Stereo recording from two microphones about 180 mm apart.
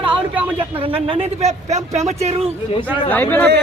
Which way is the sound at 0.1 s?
10° right (ahead or behind).